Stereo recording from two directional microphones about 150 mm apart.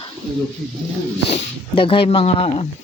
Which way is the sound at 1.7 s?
35° left (ahead or behind).